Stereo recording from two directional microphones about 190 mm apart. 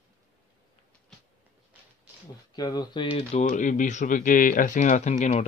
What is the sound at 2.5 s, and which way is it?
Speech, 20° left (ahead or behind).